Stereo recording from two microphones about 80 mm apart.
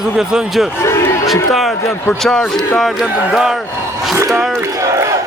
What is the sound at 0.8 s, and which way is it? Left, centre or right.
Speech, left.